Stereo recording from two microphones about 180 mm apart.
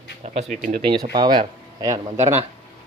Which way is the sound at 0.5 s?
45° right (ahead or behind).